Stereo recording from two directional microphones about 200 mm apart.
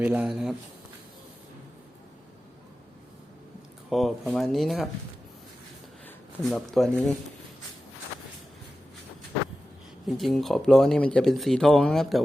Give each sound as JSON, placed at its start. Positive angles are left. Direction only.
{"t": 0.0, "sound": "speech", "side_deg": -5}
{"t": 3.8, "sound": "speech", "side_deg": 0}
{"t": 6.1, "sound": "speech", "side_deg": 0}
{"t": 10.1, "sound": "speech", "side_deg": 0}